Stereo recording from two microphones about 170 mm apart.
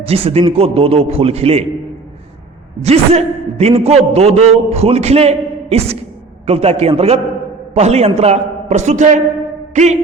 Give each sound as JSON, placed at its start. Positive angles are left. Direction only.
{"t": 0.0, "sound": "a man's voice", "side_deg": -35}
{"t": 2.8, "sound": "a man's voice", "side_deg": -35}
{"t": 9.7, "sound": "a sound", "side_deg": -40}